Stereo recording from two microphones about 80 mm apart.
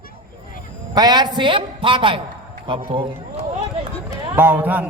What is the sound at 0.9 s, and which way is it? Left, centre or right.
A man's voice, right.